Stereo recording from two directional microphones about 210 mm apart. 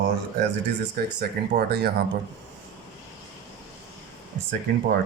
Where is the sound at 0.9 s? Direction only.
50° right (ahead or behind).